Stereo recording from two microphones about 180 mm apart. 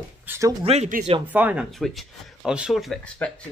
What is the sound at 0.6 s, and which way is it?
Speech, 40° right (ahead or behind).